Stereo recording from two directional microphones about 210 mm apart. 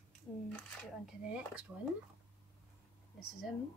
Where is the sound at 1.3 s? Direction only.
5° right (ahead or behind).